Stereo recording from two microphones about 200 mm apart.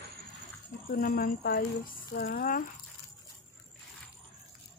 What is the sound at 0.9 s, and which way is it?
A woman's voice, 45° left (ahead or behind).